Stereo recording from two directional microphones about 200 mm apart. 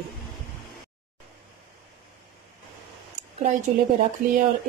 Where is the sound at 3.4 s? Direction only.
40° right (ahead or behind).